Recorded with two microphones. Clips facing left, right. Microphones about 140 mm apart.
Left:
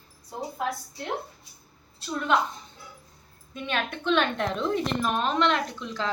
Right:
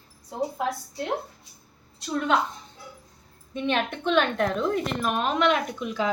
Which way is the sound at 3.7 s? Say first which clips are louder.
Right 2 dB; 10° right (ahead or behind).